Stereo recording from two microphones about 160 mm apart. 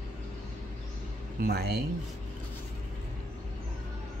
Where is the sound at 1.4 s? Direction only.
70° right (ahead or behind).